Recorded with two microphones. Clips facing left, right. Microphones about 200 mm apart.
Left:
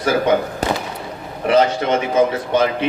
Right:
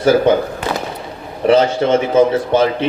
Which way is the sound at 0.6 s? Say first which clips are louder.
Even; 40° left (ahead or behind).